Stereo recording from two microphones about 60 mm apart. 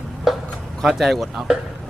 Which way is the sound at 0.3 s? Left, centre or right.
Centre.